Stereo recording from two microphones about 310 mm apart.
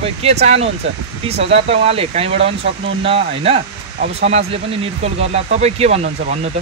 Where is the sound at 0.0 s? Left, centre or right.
Centre.